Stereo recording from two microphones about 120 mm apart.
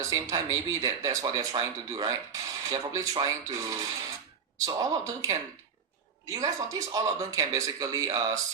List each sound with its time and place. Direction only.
0.0 s speech: 30° right (ahead or behind)